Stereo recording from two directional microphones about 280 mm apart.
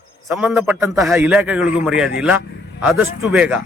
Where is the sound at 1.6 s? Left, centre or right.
Left.